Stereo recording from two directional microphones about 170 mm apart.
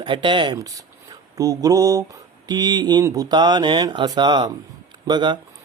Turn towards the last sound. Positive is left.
turn(degrees=-25)  # may be behind; listen again after turning